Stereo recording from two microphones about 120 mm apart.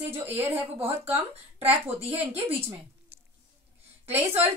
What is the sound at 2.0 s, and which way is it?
Speech, 55° right (ahead or behind).